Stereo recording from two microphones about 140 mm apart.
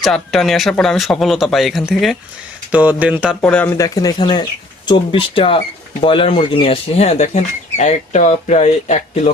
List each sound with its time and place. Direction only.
0.0 s speech: centre (ahead or behind)
3.4 s speech: 10° left (ahead or behind)
3.8 s speech: 25° left (ahead or behind); by 9.3 s 50° left (ahead or behind)